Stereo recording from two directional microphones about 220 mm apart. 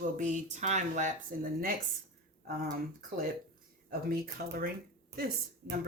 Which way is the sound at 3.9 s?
40° right (ahead or behind).